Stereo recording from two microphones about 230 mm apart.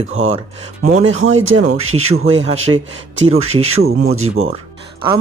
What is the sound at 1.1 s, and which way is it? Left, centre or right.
Speech, right.